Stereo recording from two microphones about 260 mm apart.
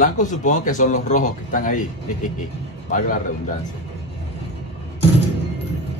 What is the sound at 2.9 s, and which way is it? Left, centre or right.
Speech, left.